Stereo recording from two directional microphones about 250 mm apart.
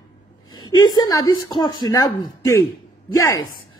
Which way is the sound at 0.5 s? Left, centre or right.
Centre.